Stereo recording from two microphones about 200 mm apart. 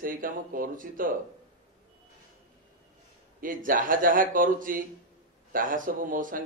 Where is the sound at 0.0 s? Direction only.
45° right (ahead or behind).